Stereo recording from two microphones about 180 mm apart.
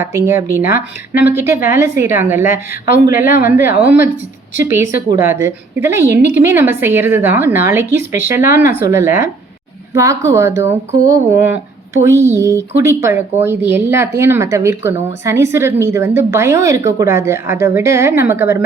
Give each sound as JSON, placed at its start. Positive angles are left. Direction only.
{"t": 0.0, "sound": "speech", "side_deg": -15}